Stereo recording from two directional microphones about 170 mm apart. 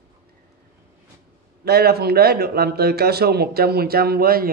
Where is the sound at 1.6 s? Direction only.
65° right (ahead or behind).